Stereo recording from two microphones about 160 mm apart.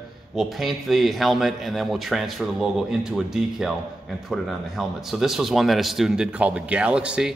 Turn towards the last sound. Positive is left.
turn(degrees=-5)  # may be behind; listen again after turning